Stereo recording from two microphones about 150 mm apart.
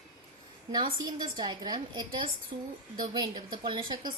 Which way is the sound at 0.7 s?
30° right (ahead or behind).